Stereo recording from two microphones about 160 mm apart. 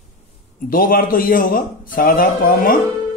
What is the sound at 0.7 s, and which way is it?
A man's voice, 60° left (ahead or behind).